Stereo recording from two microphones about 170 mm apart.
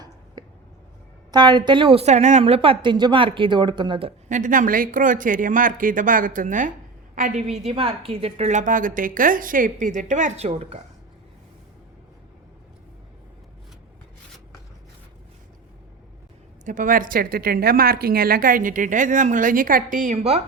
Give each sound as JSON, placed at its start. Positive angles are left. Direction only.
{"t": 1.3, "sound": "speech", "side_deg": -25}
{"t": 2.4, "sound": "speech", "side_deg": -30}
{"t": 4.3, "sound": "a woman's voice", "side_deg": -50}
{"t": 7.6, "sound": "a woman's voice", "side_deg": -35}
{"t": 16.6, "sound": "a woman's voice", "side_deg": -50}